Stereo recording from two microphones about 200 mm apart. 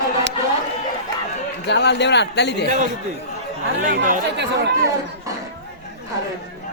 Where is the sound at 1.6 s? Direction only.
55° left (ahead or behind).